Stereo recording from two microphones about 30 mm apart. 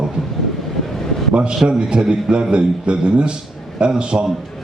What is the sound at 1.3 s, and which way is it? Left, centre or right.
A man's voice, right.